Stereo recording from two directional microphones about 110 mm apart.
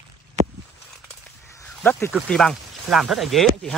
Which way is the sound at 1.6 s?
20° left (ahead or behind).